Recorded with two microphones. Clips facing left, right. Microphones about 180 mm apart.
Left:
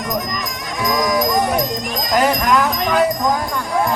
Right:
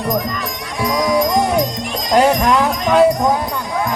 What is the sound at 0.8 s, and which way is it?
Music, 30° right (ahead or behind).